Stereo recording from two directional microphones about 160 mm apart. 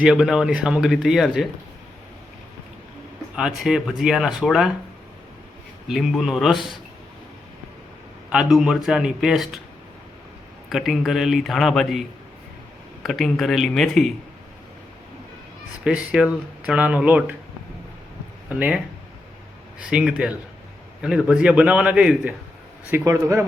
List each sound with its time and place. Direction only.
0.0 s speech: 5° right (ahead or behind)
3.3 s speech: 5° right (ahead or behind)
5.9 s speech: centre (ahead or behind)
8.3 s speech: 5° right (ahead or behind)
10.7 s speech: centre (ahead or behind)
15.8 s a man's voice: 5° right (ahead or behind)
18.4 s a man's voice: 10° right (ahead or behind)
19.8 s a man's voice: 5° right (ahead or behind)